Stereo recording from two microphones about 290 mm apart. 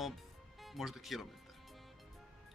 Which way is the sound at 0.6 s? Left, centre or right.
Centre.